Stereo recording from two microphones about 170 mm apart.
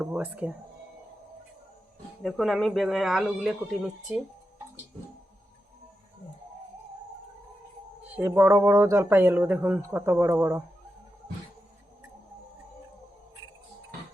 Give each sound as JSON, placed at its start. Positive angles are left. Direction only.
{"t": 0.0, "sound": "speech", "side_deg": -10}
{"t": 2.2, "sound": "speech", "side_deg": 0}
{"t": 8.0, "sound": "speech", "side_deg": -10}